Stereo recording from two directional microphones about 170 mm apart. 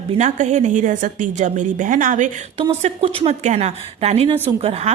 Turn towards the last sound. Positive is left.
turn(degrees=-40)  # may be behind; listen again after turning